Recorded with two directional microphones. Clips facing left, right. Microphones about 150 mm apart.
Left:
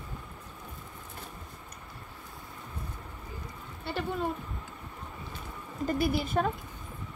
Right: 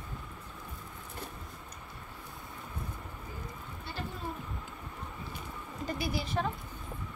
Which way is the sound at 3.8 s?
65° left (ahead or behind).